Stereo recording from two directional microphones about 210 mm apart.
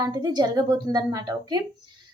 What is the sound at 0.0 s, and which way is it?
A woman's voice, 20° right (ahead or behind).